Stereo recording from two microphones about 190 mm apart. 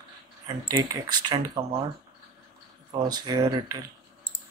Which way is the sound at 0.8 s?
20° right (ahead or behind).